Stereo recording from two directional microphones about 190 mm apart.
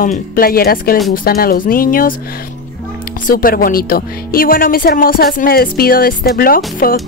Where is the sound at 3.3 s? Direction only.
50° left (ahead or behind).